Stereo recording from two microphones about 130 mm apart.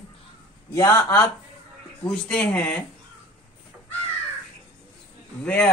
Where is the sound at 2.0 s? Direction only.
5° left (ahead or behind).